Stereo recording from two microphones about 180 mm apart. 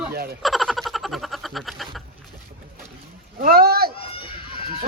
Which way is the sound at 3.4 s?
60° right (ahead or behind).